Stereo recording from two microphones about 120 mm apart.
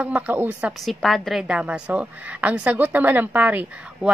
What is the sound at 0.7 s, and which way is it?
A woman's voice, centre (ahead or behind).